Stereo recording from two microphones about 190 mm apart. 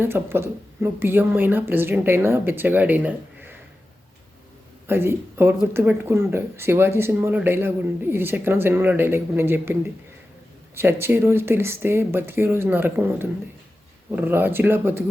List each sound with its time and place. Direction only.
0.0 s speech: 10° right (ahead or behind)
4.9 s speech: 10° right (ahead or behind)
10.8 s speech: 10° right (ahead or behind)